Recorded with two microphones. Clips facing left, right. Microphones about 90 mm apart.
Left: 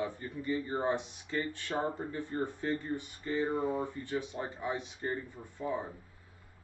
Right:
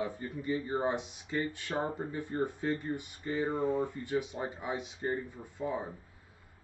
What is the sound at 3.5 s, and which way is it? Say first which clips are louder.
Speech: right 2 dB; 15° left (ahead or behind).